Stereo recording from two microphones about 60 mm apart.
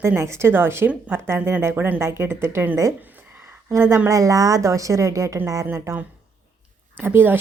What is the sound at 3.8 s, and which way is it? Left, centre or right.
A woman's voice, right.